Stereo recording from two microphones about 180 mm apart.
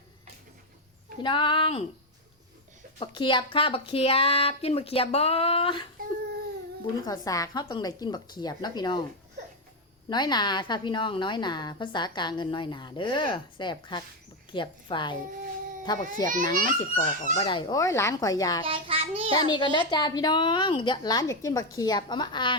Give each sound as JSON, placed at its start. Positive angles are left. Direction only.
{"t": 1.2, "sound": "a woman's voice", "side_deg": 25}
{"t": 3.0, "sound": "speech", "side_deg": 25}
{"t": 7.0, "sound": "a woman's voice", "side_deg": 20}
{"t": 10.1, "sound": "a woman's voice", "side_deg": 25}
{"t": 18.6, "sound": "a child's voice", "side_deg": -30}
{"t": 19.4, "sound": "a woman's voice", "side_deg": 25}